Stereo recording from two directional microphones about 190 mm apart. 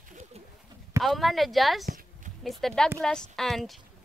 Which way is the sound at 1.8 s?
45° right (ahead or behind).